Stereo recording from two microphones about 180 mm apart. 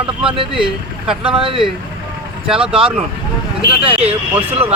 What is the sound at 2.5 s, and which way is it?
Speech, 5° right (ahead or behind).